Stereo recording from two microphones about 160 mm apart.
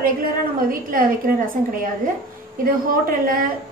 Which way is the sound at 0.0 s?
60° right (ahead or behind).